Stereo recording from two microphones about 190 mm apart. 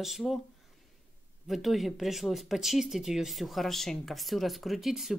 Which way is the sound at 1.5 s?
Centre (ahead or behind).